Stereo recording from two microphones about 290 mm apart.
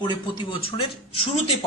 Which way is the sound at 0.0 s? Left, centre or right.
Centre.